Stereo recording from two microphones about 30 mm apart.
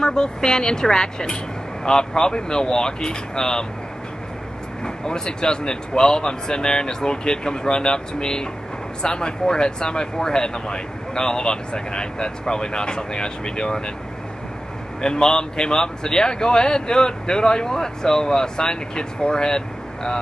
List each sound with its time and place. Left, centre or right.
0.0 s a man's voice: left
4.8 s a man's voice: left
15.0 s a man's voice: left